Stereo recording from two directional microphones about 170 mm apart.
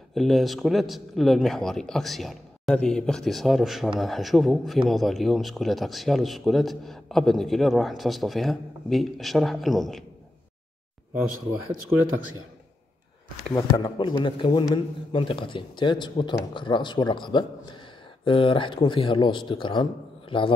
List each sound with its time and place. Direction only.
0.1 s speech: centre (ahead or behind)
13.5 s speech: 20° left (ahead or behind)